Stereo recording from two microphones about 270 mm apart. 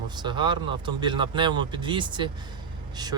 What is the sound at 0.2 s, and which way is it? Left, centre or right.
Speech, centre.